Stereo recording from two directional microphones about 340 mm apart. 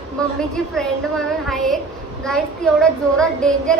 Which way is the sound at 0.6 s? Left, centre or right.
Centre.